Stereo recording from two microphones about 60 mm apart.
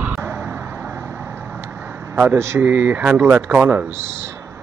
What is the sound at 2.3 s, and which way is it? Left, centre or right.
Speech, right.